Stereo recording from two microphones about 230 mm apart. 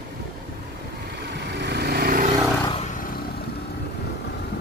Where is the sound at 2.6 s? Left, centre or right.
Left.